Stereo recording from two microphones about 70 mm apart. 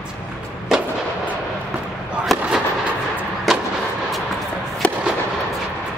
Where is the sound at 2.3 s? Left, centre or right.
Centre.